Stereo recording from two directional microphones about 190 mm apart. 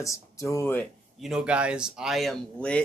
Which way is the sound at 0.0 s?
15° left (ahead or behind).